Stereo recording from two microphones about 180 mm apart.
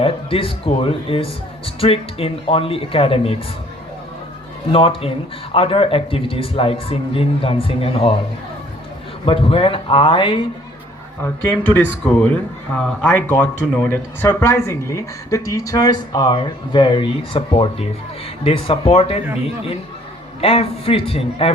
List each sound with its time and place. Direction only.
0.0 s speech: 30° left (ahead or behind)
4.7 s speech: 30° left (ahead or behind)
9.2 s speech: 30° left (ahead or behind)
11.2 s speech: 10° left (ahead or behind); by 19.2 s 30° left (ahead or behind)
20.4 s speech: 35° left (ahead or behind)